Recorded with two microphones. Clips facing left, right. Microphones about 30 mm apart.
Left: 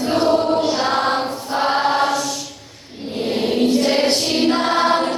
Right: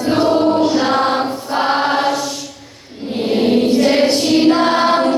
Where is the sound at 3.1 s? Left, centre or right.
Centre.